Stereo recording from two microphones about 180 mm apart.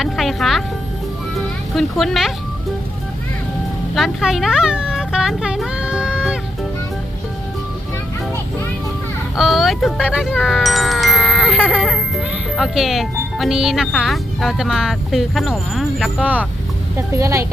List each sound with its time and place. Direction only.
0.0 s speech: centre (ahead or behind)
1.7 s speech: centre (ahead or behind)
3.9 s a sound: centre (ahead or behind)
9.3 s speech: centre (ahead or behind); by 17.4 s 15° right (ahead or behind)